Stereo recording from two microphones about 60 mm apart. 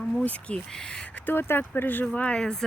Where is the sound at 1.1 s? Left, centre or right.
Left.